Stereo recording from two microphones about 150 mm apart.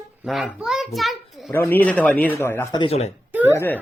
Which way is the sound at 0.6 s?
5° right (ahead or behind).